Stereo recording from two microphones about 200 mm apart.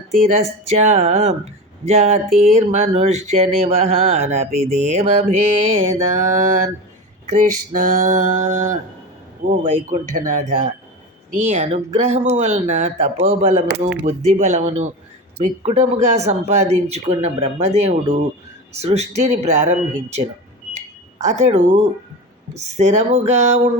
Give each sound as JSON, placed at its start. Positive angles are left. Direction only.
{"t": 0.2, "sound": "a man's voice", "side_deg": -30}
{"t": 20.7, "sound": "smoke detector", "side_deg": -35}
{"t": 22.5, "sound": "speech", "side_deg": -35}